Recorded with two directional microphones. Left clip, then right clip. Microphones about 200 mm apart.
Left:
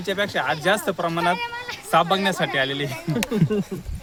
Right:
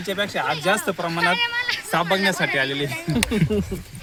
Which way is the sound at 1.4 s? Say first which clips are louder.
Right 7 dB; 45° left (ahead or behind).